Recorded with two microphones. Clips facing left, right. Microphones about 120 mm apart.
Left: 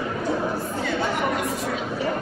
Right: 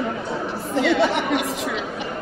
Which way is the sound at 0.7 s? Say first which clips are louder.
Right 6 dB; 80° right.